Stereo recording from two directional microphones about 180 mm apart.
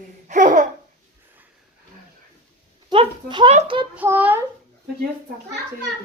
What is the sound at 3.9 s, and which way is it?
Speech, 10° right (ahead or behind).